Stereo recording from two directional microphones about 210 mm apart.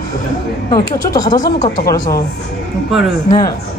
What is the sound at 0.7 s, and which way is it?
Speech, 20° left (ahead or behind).